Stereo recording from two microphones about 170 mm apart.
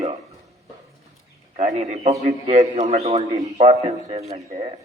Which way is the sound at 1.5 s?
40° right (ahead or behind).